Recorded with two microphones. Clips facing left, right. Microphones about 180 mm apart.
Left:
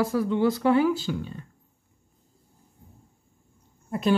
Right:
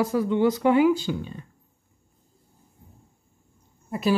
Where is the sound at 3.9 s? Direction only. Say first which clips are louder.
Even; 5° right (ahead or behind).